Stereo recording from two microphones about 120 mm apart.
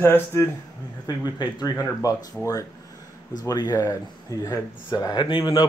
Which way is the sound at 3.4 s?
30° left (ahead or behind).